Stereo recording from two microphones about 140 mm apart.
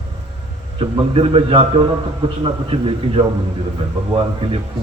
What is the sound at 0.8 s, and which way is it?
A man's voice, 40° right (ahead or behind).